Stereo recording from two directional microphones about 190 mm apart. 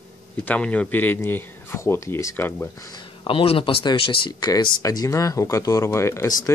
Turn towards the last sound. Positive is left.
turn(degrees=15)  # may be behind; listen again after turning